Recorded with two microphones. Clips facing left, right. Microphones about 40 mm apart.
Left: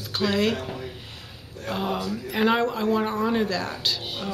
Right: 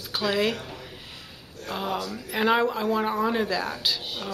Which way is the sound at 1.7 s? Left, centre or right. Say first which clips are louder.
Left 2 dB; centre.